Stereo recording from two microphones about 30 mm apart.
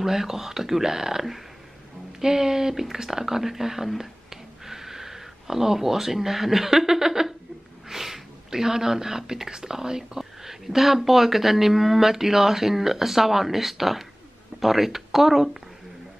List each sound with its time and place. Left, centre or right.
0.0 s speech: centre